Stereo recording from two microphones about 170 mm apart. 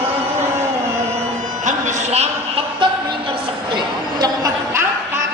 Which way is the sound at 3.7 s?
25° right (ahead or behind).